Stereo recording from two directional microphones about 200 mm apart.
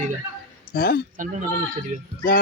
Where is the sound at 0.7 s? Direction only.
50° left (ahead or behind).